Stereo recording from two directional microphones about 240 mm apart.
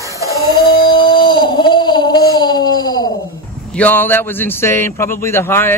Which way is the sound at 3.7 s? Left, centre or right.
Centre.